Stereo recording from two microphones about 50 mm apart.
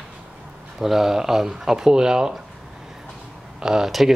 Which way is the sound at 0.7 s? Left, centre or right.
Centre.